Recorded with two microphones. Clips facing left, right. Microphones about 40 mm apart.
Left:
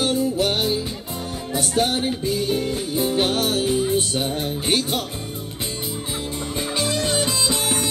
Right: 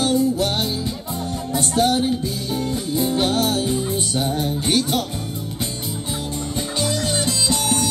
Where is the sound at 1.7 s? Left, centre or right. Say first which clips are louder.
Right 3 dB; left.